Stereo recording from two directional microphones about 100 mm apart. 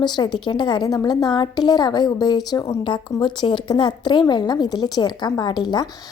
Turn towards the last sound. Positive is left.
turn(degrees=45)  # may be behind; listen again after turning